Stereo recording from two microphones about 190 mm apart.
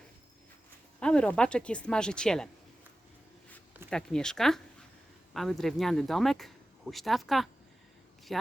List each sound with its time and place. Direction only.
0.9 s speech: 5° left (ahead or behind)
3.8 s speech: 5° left (ahead or behind)